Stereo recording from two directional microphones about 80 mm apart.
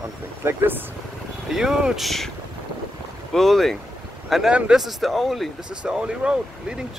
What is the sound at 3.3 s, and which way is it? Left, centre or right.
Speech, centre.